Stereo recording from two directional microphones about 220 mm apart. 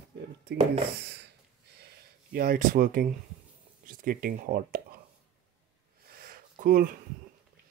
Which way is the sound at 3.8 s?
40° right (ahead or behind).